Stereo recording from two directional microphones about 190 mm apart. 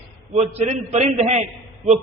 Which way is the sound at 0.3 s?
35° right (ahead or behind).